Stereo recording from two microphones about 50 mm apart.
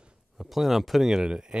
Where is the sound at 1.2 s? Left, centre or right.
Centre.